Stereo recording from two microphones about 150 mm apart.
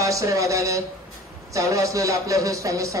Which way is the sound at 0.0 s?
20° right (ahead or behind).